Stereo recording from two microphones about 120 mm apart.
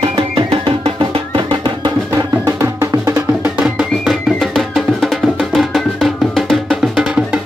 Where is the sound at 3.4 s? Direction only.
5° right (ahead or behind).